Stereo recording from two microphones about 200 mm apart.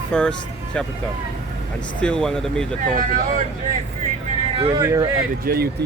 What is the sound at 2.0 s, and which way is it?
Speech, 5° left (ahead or behind).